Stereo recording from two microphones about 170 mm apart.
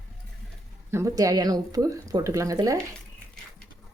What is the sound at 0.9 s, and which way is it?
Speech, 15° right (ahead or behind).